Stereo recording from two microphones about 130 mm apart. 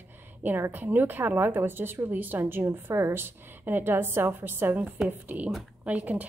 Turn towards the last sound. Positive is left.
turn(degrees=-10)  # may be behind; listen again after turning